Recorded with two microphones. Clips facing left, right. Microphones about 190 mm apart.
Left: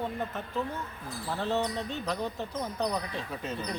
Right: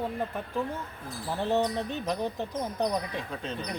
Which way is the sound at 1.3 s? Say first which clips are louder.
Right 3 dB; 15° right (ahead or behind).